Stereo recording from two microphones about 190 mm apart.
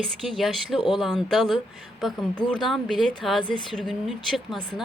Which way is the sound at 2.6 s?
Centre (ahead or behind).